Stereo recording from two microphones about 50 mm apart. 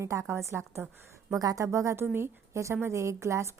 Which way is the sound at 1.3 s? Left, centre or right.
Right.